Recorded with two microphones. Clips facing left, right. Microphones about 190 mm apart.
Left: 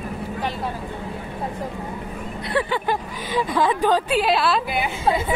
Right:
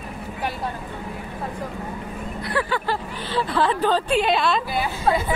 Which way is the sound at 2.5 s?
20° left (ahead or behind).